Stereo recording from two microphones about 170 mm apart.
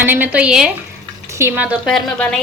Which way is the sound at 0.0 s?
10° right (ahead or behind).